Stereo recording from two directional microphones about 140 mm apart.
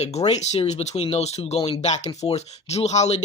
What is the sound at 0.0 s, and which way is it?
Speech, 50° left (ahead or behind).